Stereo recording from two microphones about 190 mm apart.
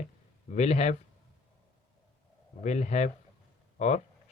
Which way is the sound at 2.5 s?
35° left (ahead or behind).